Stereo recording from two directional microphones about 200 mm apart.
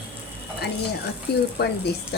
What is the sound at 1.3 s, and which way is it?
Speech, 55° left (ahead or behind).